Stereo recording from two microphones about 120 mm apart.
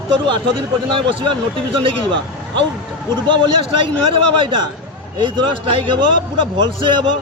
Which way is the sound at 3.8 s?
45° right (ahead or behind).